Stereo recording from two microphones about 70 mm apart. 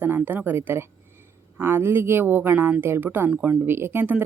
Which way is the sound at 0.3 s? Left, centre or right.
Right.